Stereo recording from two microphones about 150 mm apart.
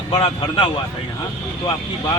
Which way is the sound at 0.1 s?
40° left (ahead or behind).